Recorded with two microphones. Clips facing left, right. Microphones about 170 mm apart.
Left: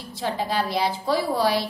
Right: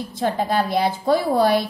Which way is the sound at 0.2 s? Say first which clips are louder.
Right 4 dB; 50° right (ahead or behind).